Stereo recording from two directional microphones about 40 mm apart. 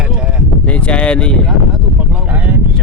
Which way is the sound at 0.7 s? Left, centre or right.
Left.